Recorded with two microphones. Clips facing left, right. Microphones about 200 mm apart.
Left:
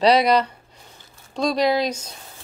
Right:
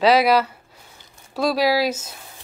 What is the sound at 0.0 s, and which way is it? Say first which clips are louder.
A woman's voice: even; 5° right (ahead or behind).